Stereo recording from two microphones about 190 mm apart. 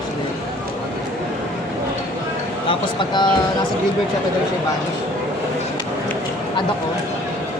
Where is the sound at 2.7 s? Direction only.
25° left (ahead or behind).